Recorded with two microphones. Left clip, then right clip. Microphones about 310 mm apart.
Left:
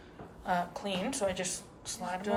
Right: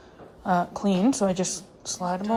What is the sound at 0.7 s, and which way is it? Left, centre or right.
Speech, centre.